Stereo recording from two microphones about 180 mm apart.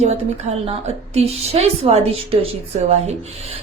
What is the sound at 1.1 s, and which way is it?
A woman's voice, 35° right (ahead or behind).